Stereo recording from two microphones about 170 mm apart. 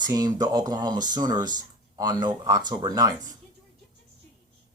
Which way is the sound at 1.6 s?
25° right (ahead or behind).